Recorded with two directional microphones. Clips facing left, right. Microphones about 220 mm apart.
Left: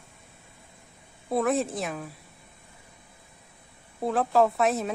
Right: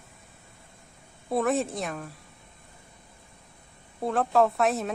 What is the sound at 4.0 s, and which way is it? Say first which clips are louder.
Speech: even; centre (ahead or behind).